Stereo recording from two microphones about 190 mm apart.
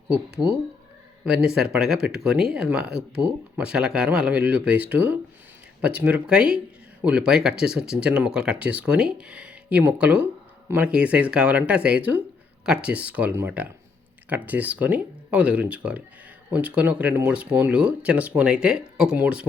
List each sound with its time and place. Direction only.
0.4 s speech: centre (ahead or behind)